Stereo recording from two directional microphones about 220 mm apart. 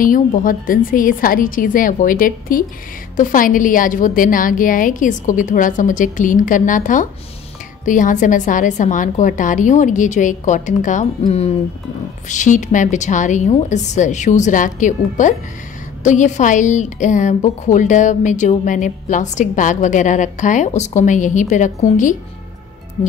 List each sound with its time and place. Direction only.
0.0 s a woman's voice: 40° left (ahead or behind)